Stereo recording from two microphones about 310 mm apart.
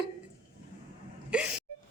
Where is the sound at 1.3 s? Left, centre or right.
Centre.